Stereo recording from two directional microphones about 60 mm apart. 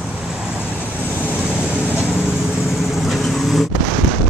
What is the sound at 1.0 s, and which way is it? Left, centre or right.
Vehicle, right.